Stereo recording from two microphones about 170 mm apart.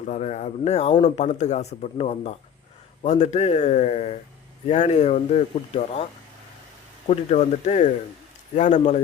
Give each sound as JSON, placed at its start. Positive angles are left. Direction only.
{"t": 0.0, "sound": "speech", "side_deg": 45}
{"t": 7.1, "sound": "speech", "side_deg": 45}